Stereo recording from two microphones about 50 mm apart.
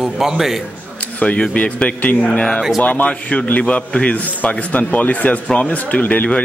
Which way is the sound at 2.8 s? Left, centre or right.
Left.